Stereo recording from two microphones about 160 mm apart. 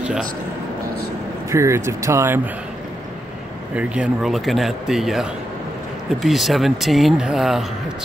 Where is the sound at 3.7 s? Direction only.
5° right (ahead or behind).